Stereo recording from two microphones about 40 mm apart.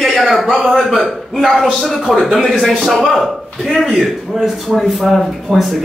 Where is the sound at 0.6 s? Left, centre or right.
Centre.